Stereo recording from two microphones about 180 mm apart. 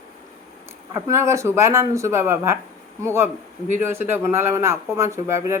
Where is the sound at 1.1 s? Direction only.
15° right (ahead or behind).